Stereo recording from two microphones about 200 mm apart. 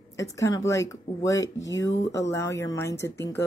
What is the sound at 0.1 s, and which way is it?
Speech, 15° left (ahead or behind).